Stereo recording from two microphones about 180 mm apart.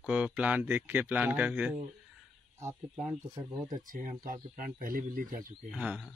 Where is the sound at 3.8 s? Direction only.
50° right (ahead or behind).